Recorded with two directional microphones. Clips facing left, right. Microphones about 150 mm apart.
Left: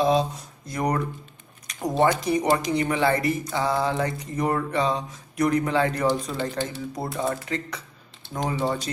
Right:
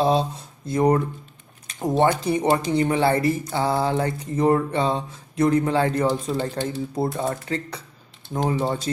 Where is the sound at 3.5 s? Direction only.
30° right (ahead or behind).